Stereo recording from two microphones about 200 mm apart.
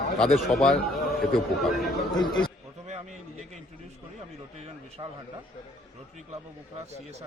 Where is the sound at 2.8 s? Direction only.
35° right (ahead or behind).